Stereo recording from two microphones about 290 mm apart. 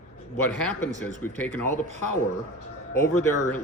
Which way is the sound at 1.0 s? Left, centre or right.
Centre.